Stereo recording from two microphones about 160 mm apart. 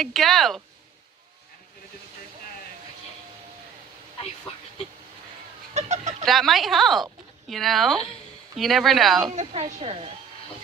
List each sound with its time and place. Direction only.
0.0 s speech: centre (ahead or behind)
5.7 s fowl: 45° right (ahead or behind)
6.2 s speech: centre (ahead or behind)
9.3 s speech: 45° right (ahead or behind)